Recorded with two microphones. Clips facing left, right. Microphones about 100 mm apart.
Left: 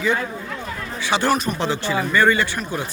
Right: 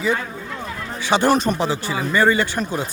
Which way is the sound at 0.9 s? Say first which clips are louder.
Right 3 dB; 20° right (ahead or behind).